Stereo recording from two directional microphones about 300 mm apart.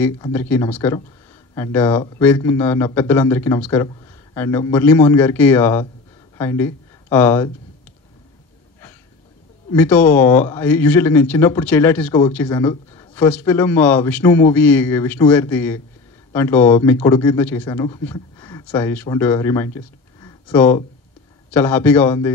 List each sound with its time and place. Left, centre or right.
0.0 s a man's voice: centre
9.7 s speech: centre
10.0 s speech: left
10.4 s a man's voice: centre